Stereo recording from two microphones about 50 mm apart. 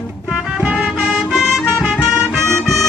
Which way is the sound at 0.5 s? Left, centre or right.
Right.